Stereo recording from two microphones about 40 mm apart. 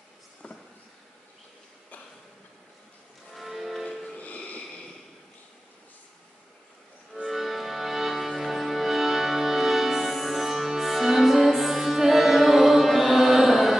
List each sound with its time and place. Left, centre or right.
0.4 s a sound: left
3.3 s music: centre
3.8 s music: centre
4.2 s music: left
7.2 s music: centre